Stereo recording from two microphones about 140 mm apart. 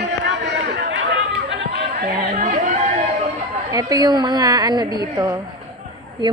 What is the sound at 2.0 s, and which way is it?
Chatter, 75° right (ahead or behind).